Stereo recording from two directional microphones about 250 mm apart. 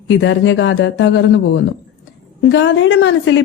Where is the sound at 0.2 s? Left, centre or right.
Left.